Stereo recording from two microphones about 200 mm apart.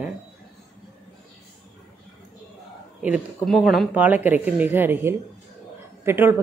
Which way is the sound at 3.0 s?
5° right (ahead or behind).